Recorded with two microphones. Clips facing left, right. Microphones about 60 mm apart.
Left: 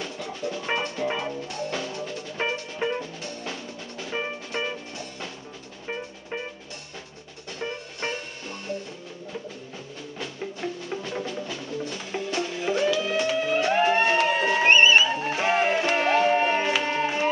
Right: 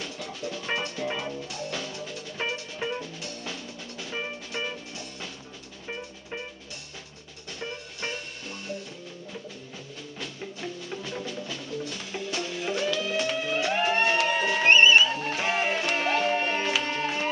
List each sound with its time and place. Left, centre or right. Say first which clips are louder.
0.0 s music: left 3 dB; centre
1.5 s music: left 4 dB; centre
5.9 s music: left 4 dB; centre
7.6 s music: left 4 dB; centre
10.1 s music: left 4 dB; centre